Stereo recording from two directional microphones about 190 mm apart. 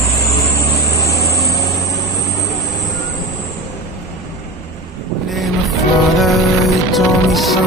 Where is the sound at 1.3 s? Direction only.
15° left (ahead or behind).